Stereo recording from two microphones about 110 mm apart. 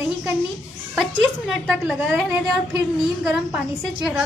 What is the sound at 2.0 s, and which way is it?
Speech, 20° right (ahead or behind).